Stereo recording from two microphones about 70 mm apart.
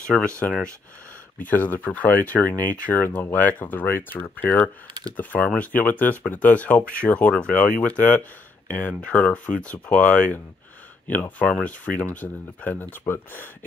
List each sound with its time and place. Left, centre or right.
0.1 s speech: centre
1.5 s speech: left